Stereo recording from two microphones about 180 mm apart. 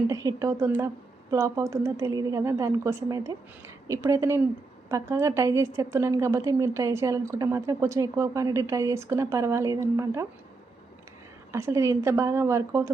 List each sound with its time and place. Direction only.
0.1 s a woman's voice: 20° right (ahead or behind)
11.5 s a woman's voice: 15° right (ahead or behind)